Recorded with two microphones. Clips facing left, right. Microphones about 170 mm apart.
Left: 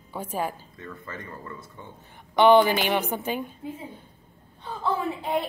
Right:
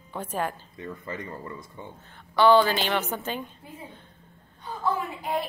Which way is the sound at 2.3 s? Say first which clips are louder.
Left 2 dB; 20° left (ahead or behind).